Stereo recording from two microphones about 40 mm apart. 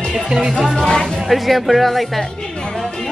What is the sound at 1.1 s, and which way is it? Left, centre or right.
Speech, centre.